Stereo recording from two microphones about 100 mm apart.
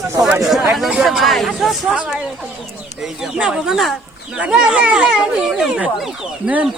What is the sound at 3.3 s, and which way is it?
Speech, 5° right (ahead or behind).